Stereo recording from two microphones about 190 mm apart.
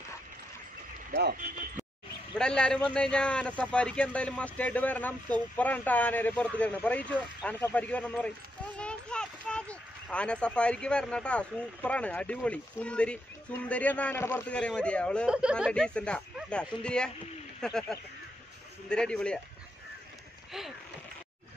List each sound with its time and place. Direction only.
1.1 s speech: 55° right (ahead or behind)
2.3 s speech: 5° left (ahead or behind)
15.2 s speech: 5° right (ahead or behind)